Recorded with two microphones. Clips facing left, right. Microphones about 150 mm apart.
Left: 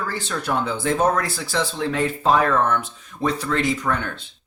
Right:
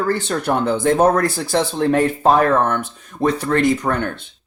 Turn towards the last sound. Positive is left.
turn(degrees=-55)  # may be behind; listen again after turning